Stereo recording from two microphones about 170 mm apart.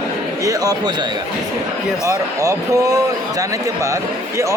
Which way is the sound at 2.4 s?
20° right (ahead or behind).